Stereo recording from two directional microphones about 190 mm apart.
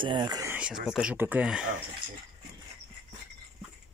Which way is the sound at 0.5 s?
5° right (ahead or behind).